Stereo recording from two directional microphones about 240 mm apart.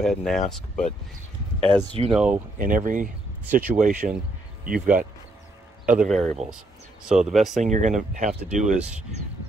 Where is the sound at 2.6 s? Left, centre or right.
Right.